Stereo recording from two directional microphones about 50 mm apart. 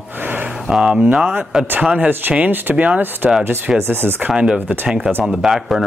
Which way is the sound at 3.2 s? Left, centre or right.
Centre.